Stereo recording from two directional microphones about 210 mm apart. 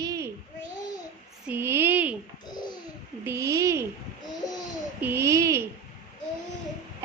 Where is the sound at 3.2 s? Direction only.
15° right (ahead or behind).